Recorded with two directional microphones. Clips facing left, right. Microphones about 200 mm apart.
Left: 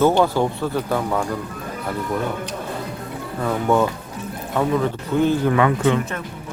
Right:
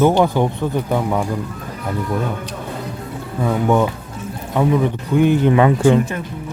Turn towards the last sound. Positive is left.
turn(degrees=-30)  # may be behind; listen again after turning